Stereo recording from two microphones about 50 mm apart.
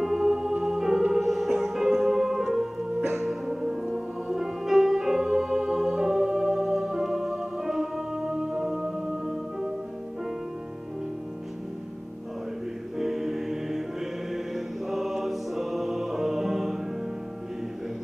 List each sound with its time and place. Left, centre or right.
0.0 s music: centre
12.9 s music: centre